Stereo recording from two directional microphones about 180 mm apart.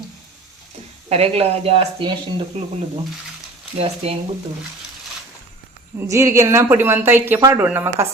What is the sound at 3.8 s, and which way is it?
Speech, 35° right (ahead or behind).